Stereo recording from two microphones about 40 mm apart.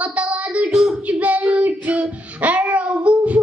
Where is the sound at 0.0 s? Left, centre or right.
Right.